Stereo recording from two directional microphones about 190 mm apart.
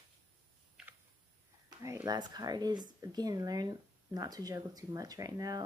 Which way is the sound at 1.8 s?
15° right (ahead or behind).